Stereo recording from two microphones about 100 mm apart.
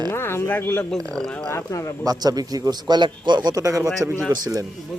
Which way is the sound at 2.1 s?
40° right (ahead or behind).